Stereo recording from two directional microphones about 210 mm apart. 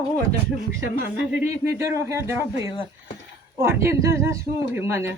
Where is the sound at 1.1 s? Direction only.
10° right (ahead or behind).